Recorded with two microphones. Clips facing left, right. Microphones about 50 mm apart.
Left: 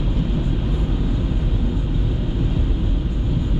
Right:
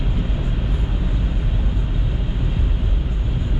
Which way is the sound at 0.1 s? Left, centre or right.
Centre.